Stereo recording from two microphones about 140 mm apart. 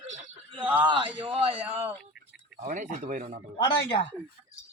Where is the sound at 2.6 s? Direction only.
65° right (ahead or behind).